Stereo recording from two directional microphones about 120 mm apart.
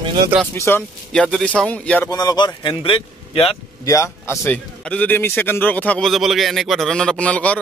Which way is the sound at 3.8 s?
25° left (ahead or behind).